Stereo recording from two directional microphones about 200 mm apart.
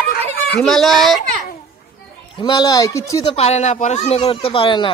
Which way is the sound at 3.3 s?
30° left (ahead or behind).